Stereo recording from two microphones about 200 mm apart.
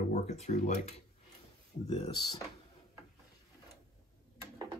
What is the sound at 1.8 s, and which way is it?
Speech, 25° left (ahead or behind).